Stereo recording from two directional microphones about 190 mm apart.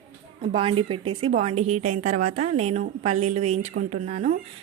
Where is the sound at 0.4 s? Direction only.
30° right (ahead or behind).